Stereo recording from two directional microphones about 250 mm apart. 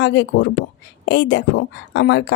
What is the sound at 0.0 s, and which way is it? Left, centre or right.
Speech, left.